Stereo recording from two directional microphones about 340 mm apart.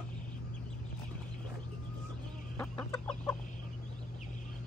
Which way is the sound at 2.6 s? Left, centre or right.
Centre.